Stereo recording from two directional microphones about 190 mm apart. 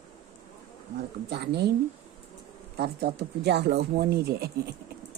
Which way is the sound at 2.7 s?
55° right (ahead or behind).